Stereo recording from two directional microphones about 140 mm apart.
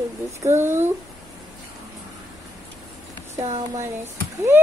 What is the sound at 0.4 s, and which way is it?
Speech, 20° right (ahead or behind).